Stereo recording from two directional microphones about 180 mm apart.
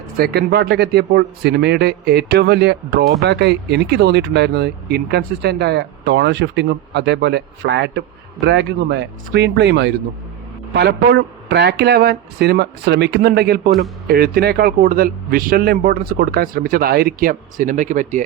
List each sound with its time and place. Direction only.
0.2 s a man's voice: 60° right (ahead or behind); by 18.2 s 45° right (ahead or behind)